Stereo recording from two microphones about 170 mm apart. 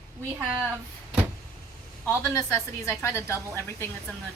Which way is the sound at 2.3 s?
15° left (ahead or behind).